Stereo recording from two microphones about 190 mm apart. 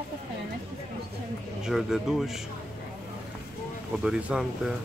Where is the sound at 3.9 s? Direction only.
5° right (ahead or behind).